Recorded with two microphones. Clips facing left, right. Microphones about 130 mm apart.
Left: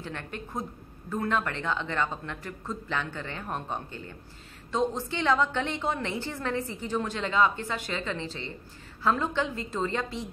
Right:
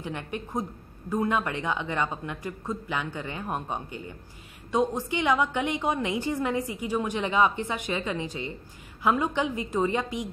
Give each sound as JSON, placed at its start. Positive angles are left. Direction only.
{"t": 0.0, "sound": "a woman's voice", "side_deg": -15}